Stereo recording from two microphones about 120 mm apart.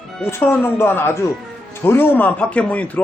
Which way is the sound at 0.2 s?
20° left (ahead or behind).